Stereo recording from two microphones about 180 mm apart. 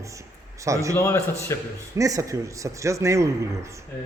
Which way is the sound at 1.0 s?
15° left (ahead or behind).